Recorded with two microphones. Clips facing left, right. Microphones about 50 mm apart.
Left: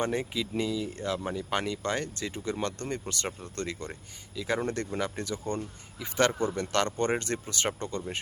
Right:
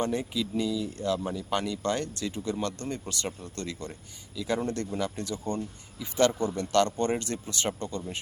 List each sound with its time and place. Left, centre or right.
0.0 s speech: left